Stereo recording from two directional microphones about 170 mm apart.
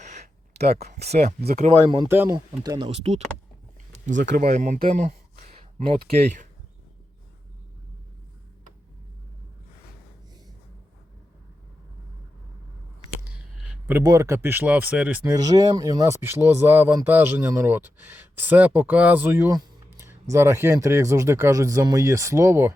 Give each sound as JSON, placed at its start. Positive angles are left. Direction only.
{"t": 0.0, "sound": "a sound", "side_deg": -65}
{"t": 0.7, "sound": "speech", "side_deg": -40}
{"t": 2.0, "sound": "speech", "side_deg": -10}
{"t": 2.3, "sound": "speech", "side_deg": -25}
{"t": 2.9, "sound": "speech", "side_deg": -35}
{"t": 3.9, "sound": "a sound", "side_deg": -45}
{"t": 5.8, "sound": "speech", "side_deg": -35}
{"t": 13.6, "sound": "a sound", "side_deg": -10}
{"t": 14.0, "sound": "speech", "side_deg": -20}